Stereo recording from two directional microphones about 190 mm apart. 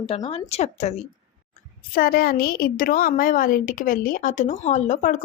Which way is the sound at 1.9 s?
50° left (ahead or behind).